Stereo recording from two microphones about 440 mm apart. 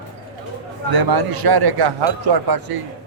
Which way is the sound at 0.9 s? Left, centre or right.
Right.